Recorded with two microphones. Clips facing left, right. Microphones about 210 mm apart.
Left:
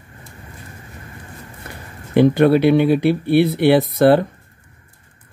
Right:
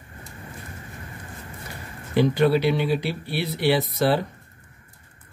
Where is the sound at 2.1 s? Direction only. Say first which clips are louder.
Left 7 dB; 55° left (ahead or behind).